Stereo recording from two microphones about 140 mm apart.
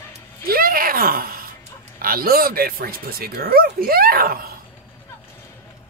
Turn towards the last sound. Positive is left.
turn(degrees=-90)